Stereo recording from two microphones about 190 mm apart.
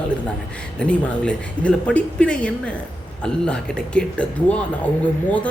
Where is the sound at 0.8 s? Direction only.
5° left (ahead or behind).